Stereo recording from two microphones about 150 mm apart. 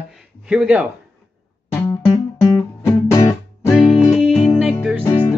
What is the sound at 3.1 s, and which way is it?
Music, 20° left (ahead or behind).